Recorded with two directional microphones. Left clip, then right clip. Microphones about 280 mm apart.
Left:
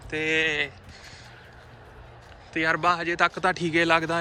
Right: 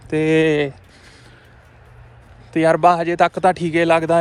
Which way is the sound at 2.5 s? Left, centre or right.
Centre.